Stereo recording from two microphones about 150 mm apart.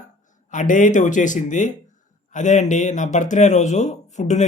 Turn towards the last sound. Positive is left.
turn(degrees=55)  # may be behind; listen again after turning